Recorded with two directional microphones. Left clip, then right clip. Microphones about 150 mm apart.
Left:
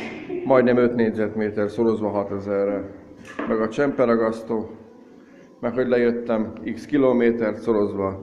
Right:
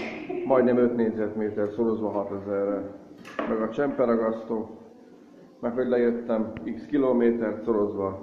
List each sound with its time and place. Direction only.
0.5 s a man's voice: 20° left (ahead or behind)
5.6 s a man's voice: 15° left (ahead or behind)